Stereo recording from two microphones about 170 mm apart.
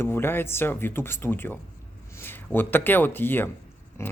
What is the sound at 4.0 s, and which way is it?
Pig, 15° left (ahead or behind).